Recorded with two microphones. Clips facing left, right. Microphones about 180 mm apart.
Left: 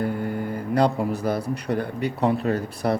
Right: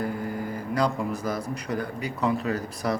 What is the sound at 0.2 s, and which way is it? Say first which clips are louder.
Mantra: left 4 dB; 65° left (ahead or behind).